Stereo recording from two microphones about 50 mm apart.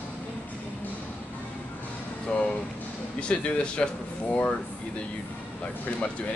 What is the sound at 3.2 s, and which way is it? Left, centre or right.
Speech, left.